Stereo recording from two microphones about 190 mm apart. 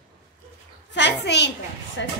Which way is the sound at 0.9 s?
65° left (ahead or behind).